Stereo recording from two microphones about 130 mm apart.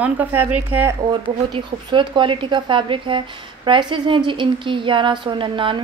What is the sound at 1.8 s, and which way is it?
A woman's voice, 40° right (ahead or behind).